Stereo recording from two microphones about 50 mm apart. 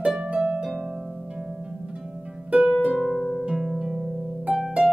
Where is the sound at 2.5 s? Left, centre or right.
Right.